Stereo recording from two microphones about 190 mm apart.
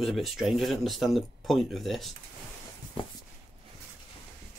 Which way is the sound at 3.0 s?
25° left (ahead or behind).